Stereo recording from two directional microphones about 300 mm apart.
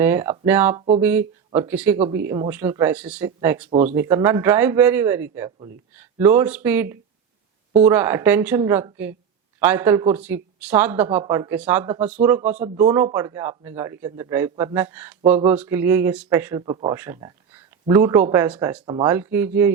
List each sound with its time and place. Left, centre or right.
0.0 s a man's voice: centre
3.7 s speech: right
3.9 s a man's voice: centre